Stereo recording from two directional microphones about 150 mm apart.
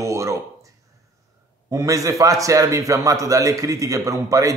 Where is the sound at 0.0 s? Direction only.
20° right (ahead or behind).